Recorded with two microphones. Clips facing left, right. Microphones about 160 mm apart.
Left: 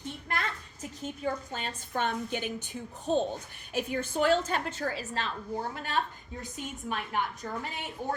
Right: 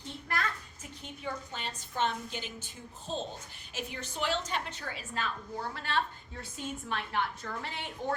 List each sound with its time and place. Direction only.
0.3 s a sound: 20° left (ahead or behind)
0.8 s a woman's voice: 40° left (ahead or behind)
5.7 s a woman's voice: 15° left (ahead or behind)